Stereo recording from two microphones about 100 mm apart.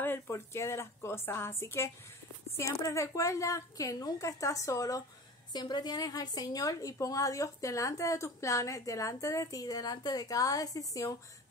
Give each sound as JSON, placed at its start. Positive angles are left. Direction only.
{"t": 0.0, "sound": "a woman's voice", "side_deg": 25}
{"t": 5.5, "sound": "a woman's voice", "side_deg": 45}